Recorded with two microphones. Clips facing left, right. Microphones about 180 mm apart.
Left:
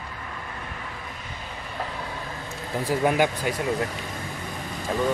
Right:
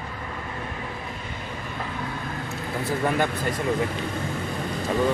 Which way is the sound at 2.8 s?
10° left (ahead or behind).